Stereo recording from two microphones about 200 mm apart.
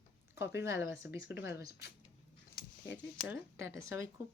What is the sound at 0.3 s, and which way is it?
Speech, 10° right (ahead or behind).